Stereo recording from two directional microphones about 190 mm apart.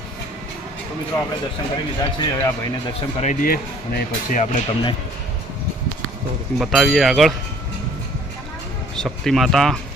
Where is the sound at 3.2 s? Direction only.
45° left (ahead or behind).